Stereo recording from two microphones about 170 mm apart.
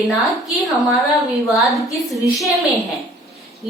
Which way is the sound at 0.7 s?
Centre (ahead or behind).